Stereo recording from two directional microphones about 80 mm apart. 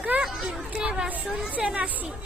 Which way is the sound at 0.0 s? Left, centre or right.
Centre.